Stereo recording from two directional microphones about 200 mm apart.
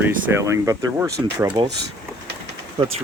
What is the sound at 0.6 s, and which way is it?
Speech, 15° right (ahead or behind).